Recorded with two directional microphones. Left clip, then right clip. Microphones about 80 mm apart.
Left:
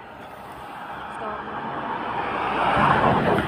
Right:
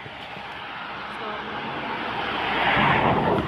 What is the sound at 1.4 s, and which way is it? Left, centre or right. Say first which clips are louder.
Vehicle: left 1 dB; left.